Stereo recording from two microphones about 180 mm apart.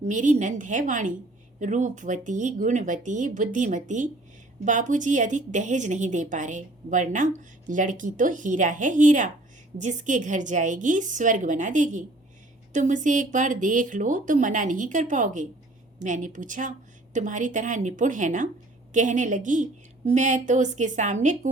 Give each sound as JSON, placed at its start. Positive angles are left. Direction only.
{"t": 0.0, "sound": "a woman's voice", "side_deg": -45}